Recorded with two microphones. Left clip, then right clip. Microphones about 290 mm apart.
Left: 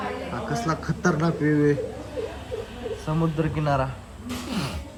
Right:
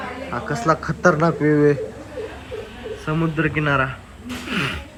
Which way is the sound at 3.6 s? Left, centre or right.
Left.